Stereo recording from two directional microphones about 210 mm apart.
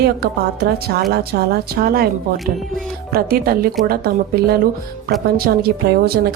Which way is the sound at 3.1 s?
45° right (ahead or behind).